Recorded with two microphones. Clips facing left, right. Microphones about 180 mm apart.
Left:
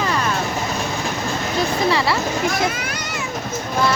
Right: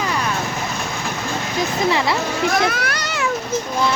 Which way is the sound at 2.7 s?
75° right (ahead or behind).